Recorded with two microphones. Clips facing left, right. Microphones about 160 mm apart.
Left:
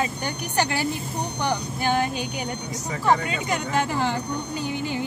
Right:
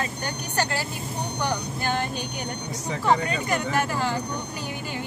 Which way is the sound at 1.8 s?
15° left (ahead or behind).